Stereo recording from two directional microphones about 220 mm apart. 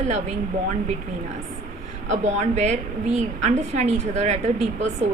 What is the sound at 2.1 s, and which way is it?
A woman's voice, 30° right (ahead or behind).